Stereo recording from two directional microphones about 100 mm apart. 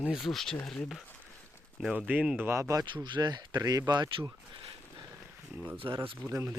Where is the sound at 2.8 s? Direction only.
50° right (ahead or behind).